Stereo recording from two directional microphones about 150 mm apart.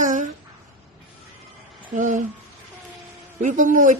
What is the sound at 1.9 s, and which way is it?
Speech, 60° right (ahead or behind).